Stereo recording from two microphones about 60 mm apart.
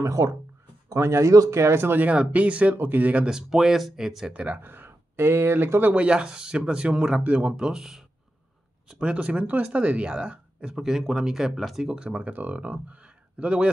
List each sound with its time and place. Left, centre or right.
0.0 s speech: right
0.8 s speech: right
2.0 s speech: right
3.3 s speech: centre
4.3 s speech: right
4.6 s speech: right
5.9 s speech: centre
8.8 s speech: centre
12.1 s speech: right